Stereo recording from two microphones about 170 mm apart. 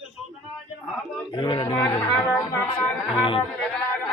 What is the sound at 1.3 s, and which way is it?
Speech, 30° left (ahead or behind).